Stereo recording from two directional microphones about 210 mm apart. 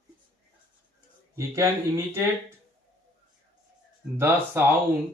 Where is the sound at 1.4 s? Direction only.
15° right (ahead or behind).